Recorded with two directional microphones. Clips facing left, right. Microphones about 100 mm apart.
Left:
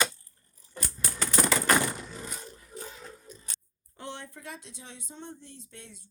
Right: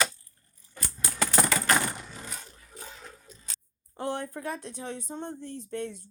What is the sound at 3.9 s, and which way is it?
Speech, 45° right (ahead or behind).